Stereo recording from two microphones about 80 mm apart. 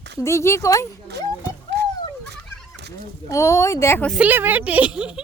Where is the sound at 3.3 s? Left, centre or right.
Left.